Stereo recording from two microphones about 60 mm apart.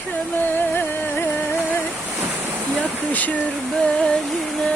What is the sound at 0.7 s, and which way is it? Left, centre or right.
Music, left.